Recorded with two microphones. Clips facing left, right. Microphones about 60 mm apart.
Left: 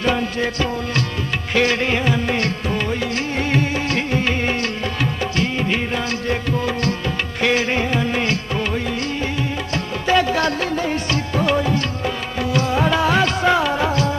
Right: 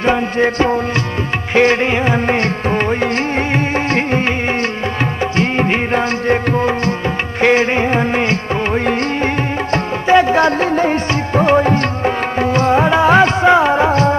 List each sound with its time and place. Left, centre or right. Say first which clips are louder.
0.0 s music: right 6 dB; right
5.4 s music: right 6 dB; right
10.0 s music: right 6 dB; right